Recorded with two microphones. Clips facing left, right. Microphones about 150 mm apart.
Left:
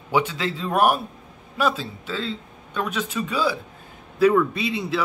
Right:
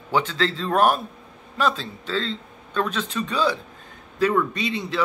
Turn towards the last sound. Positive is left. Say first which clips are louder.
# left 1 dB
turn(degrees=10)  # may be behind; listen again after turning